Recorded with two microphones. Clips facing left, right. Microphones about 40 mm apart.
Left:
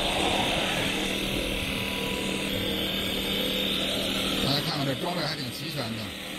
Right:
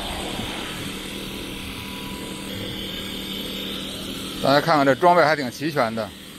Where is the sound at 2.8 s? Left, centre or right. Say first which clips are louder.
Left 2 dB; left.